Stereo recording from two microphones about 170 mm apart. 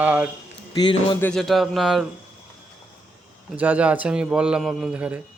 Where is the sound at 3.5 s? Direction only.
10° right (ahead or behind).